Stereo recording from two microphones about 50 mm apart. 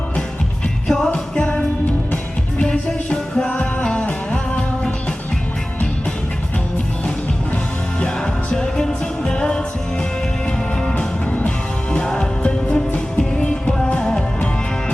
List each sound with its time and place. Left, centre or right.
0.9 s music: centre
1.1 s music: left
2.6 s music: centre
7.9 s music: centre
10.9 s music: left